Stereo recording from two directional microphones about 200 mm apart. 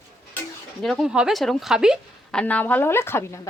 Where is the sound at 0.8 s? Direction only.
Centre (ahead or behind).